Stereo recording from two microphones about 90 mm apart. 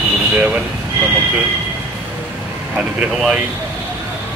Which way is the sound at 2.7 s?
15° right (ahead or behind).